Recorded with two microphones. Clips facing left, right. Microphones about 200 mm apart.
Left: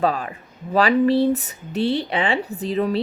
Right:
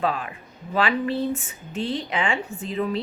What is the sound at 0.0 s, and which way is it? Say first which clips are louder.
A woman's voice: left 4 dB; 40° left (ahead or behind).